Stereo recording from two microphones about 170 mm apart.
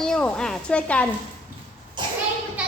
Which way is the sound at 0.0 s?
5° left (ahead or behind).